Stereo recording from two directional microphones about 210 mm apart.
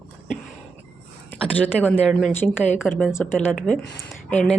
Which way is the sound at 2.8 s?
Centre (ahead or behind).